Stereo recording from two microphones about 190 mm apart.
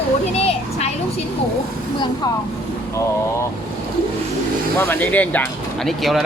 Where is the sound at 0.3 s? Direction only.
30° left (ahead or behind).